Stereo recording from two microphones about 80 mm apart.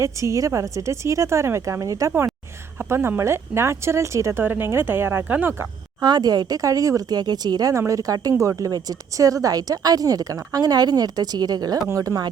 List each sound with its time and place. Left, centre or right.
0.0 s speech: right
2.7 s speech: right
4.4 s speech: right
6.0 s speech: right
7.7 s speech: right
11.9 s speech: right